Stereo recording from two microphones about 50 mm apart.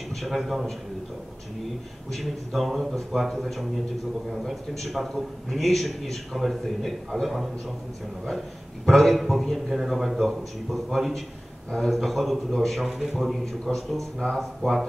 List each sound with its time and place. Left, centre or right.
0.2 s a man's voice: centre
2.1 s a man's voice: centre
8.8 s a man's voice: centre